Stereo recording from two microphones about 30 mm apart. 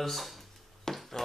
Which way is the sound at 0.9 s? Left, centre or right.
Centre.